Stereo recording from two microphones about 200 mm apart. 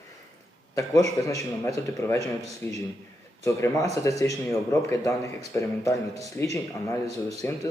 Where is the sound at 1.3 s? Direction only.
15° left (ahead or behind).